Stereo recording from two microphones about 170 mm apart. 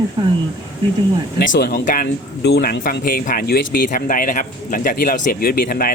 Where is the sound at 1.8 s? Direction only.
50° left (ahead or behind).